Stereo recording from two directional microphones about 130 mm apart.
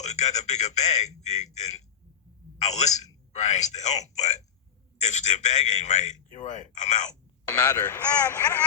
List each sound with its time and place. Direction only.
0.0 s a man's voice: 60° left (ahead or behind)
7.9 s speech: 15° left (ahead or behind)